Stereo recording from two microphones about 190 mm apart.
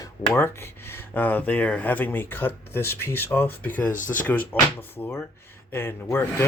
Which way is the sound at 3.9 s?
45° left (ahead or behind).